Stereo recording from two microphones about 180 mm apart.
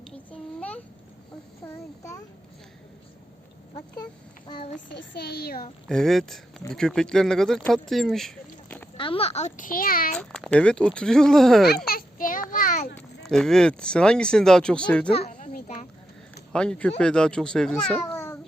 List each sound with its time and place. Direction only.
0.3 s a sound: 10° left (ahead or behind)
1.6 s child singing: 15° left (ahead or behind)
4.4 s a child's voice: 30° left (ahead or behind)
4.9 s a woman's voice: 65° left (ahead or behind)
5.9 s speech: centre (ahead or behind)
9.0 s a child's voice: 30° left (ahead or behind); by 10.2 s 50° left (ahead or behind)
10.2 s speech: 5° left (ahead or behind)
11.9 s child singing: 50° left (ahead or behind)
13.2 s speech: 5° left (ahead or behind)
15.3 s a sound: 45° left (ahead or behind)
16.5 s speech: 5° left (ahead or behind)